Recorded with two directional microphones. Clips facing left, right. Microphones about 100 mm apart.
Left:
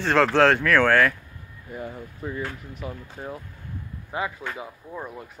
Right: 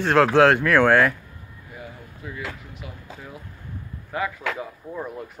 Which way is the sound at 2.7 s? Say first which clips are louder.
Left 4 dB; 40° left (ahead or behind).